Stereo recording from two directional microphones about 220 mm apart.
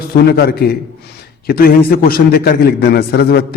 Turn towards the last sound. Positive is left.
turn(degrees=45)  # may be behind; listen again after turning